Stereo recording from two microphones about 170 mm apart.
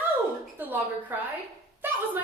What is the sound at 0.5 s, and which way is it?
Speech, 10° right (ahead or behind).